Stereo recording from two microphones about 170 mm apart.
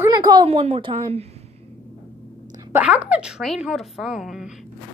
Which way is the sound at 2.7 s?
10° right (ahead or behind).